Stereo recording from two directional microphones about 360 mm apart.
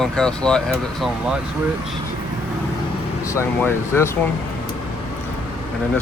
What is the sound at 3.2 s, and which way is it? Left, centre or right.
Speech, centre.